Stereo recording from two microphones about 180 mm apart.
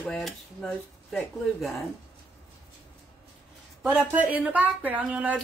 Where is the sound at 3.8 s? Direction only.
10° right (ahead or behind).